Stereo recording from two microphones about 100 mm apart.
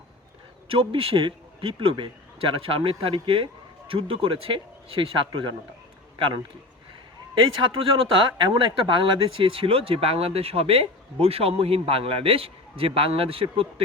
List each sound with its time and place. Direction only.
0.7 s speech: 65° right (ahead or behind)
7.4 s speech: 55° right (ahead or behind)